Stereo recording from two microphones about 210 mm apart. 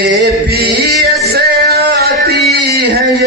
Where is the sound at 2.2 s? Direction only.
50° right (ahead or behind).